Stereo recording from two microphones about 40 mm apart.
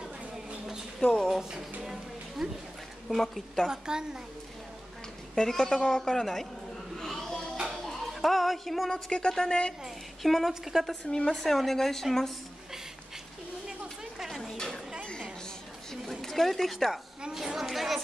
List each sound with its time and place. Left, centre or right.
1.0 s speech: left
1.8 s music: centre
3.1 s speech: centre
3.6 s a woman's voice: centre
5.3 s speech: centre
7.0 s music: centre
7.7 s a sound: centre
8.9 s speech: left
10.2 s speech: centre
14.2 s a sound: centre
14.5 s a sound: centre
15.9 s a sound: centre
17.6 s speech: centre